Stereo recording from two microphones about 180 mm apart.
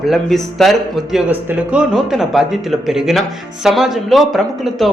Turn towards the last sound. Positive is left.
turn(degrees=0)  # may be behind; listen again after turning